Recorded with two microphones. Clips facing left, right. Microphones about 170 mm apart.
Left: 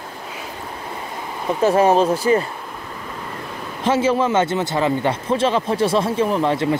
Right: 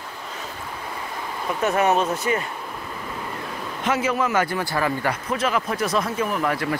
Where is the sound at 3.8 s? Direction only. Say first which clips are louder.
Left 5 dB; 30° left (ahead or behind).